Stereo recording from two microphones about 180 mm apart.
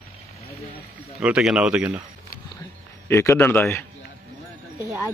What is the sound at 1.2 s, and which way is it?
Speech, 5° right (ahead or behind).